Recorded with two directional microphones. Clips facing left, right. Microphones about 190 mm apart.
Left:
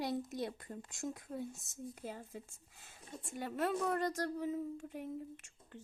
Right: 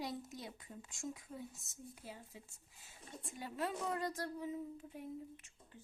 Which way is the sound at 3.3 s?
60° left (ahead or behind).